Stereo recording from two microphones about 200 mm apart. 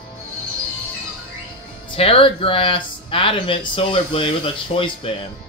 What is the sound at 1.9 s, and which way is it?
Speech, 25° left (ahead or behind).